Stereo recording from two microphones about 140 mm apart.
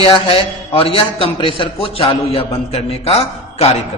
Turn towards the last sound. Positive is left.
turn(degrees=45)  # may be behind; listen again after turning